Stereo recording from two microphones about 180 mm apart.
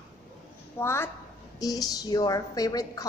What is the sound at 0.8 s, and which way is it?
A woman's voice, 15° left (ahead or behind).